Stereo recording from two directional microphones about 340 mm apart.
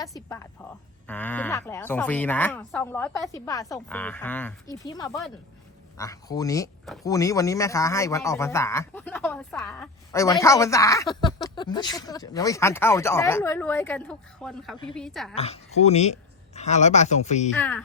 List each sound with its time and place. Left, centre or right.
0.0 s speech: centre
15.4 s speech: centre
17.6 s speech: centre